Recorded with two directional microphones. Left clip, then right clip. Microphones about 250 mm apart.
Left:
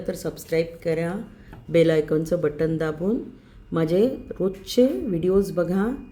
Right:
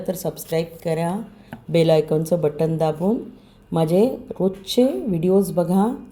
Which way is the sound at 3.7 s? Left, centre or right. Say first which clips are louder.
Right 3 dB; centre.